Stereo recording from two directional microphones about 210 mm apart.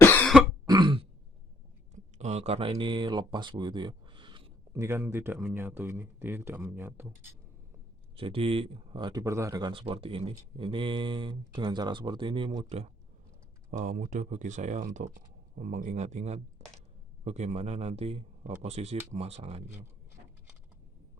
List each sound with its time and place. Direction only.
0.0 s throat clearing: 10° left (ahead or behind)
0.7 s throat clearing: 20° right (ahead or behind)
2.1 s speech: 30° right (ahead or behind); by 7.3 s 10° right (ahead or behind)
8.1 s speech: 25° right (ahead or behind)